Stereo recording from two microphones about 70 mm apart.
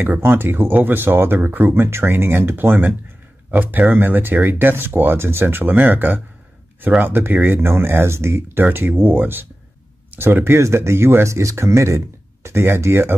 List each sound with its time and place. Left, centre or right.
0.0 s speech: right